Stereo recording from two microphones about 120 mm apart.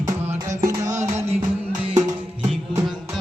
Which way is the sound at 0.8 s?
85° right.